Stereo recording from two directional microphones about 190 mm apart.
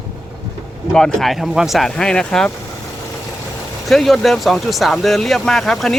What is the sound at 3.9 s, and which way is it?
Speech, centre (ahead or behind).